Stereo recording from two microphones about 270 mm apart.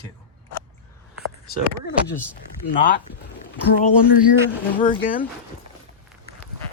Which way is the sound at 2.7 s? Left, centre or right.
Left.